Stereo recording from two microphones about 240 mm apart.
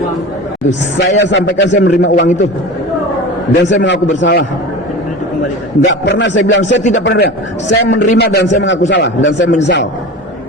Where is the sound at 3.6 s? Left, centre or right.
Left.